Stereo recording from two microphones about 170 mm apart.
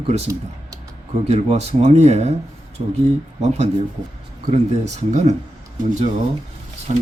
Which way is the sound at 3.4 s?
40° right (ahead or behind).